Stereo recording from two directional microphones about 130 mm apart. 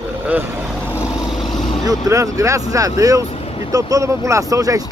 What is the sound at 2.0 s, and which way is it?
Speech, 25° right (ahead or behind).